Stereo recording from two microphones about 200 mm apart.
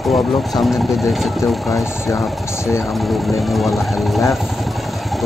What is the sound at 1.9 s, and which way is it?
Speech, 15° left (ahead or behind).